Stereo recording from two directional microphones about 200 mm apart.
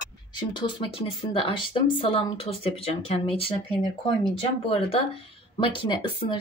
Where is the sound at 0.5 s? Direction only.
20° left (ahead or behind).